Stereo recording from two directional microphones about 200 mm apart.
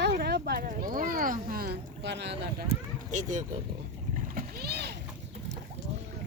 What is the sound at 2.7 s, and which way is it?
Speech, 40° right (ahead or behind).